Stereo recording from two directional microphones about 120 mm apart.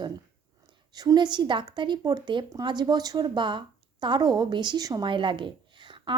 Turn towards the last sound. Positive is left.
turn(degrees=-40)  # may be behind; listen again after turning